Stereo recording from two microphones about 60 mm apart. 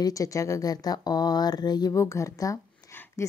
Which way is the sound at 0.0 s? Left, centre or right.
Left.